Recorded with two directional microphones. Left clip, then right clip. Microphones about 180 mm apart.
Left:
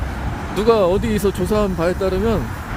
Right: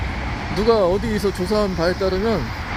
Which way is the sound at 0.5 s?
10° left (ahead or behind).